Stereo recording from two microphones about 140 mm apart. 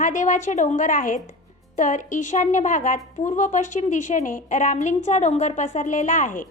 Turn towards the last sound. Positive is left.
turn(degrees=70)  # may be behind; listen again after turning